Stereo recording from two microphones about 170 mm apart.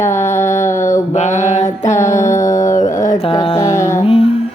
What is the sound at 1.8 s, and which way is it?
Mantra, 15° left (ahead or behind).